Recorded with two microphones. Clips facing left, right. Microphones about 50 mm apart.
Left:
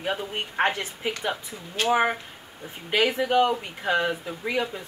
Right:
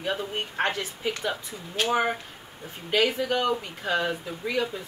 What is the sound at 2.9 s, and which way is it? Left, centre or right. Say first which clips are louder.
Speech: left 1 dB; centre.